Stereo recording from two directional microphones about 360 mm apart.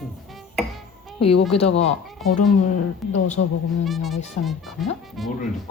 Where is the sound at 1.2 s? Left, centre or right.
Left.